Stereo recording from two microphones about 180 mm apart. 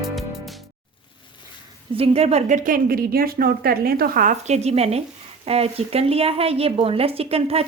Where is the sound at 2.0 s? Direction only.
35° right (ahead or behind).